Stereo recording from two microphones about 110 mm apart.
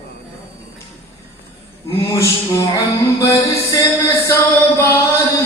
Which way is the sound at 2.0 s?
30° left (ahead or behind).